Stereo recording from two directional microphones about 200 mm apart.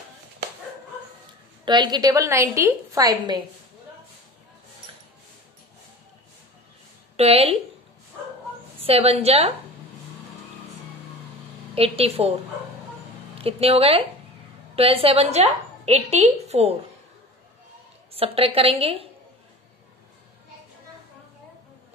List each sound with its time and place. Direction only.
1.6 s a woman's voice: 20° right (ahead or behind)
7.2 s a woman's voice: 30° right (ahead or behind)
8.8 s a woman's voice: 30° right (ahead or behind)
11.7 s a woman's voice: 30° right (ahead or behind)
13.4 s a woman's voice: 30° right (ahead or behind)
18.1 s a woman's voice: 30° right (ahead or behind)